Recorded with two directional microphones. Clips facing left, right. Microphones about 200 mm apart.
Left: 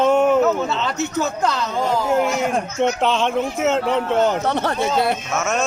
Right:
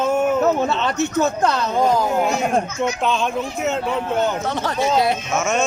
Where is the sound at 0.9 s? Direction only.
55° right (ahead or behind).